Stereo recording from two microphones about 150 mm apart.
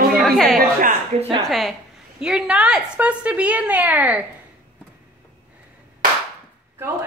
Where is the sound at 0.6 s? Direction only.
65° right (ahead or behind).